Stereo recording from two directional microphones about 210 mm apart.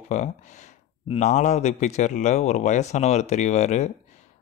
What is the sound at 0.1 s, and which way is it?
Speech, 35° left (ahead or behind).